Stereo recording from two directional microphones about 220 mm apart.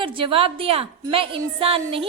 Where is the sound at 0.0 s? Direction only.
25° right (ahead or behind).